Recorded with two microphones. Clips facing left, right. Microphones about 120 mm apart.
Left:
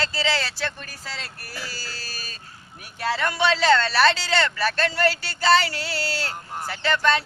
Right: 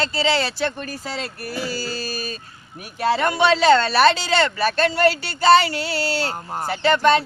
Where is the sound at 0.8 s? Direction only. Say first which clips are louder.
Right 8 dB; 20° right (ahead or behind).